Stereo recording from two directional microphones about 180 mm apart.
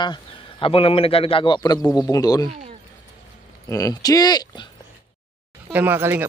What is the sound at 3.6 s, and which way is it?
Speech, 20° left (ahead or behind).